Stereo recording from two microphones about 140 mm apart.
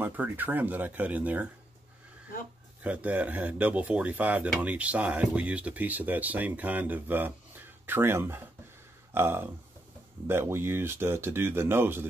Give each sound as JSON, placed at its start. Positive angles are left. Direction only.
{"t": 0.0, "sound": "speech", "side_deg": -15}
{"t": 2.8, "sound": "speech", "side_deg": -10}